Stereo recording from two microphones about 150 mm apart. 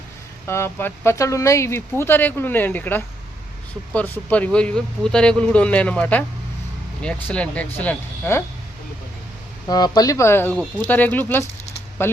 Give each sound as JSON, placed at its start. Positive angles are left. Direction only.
{"t": 0.4, "sound": "speech", "side_deg": 15}
{"t": 9.6, "sound": "speech", "side_deg": 25}